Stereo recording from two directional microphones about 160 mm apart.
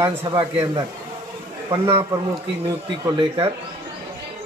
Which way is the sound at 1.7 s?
15° right (ahead or behind).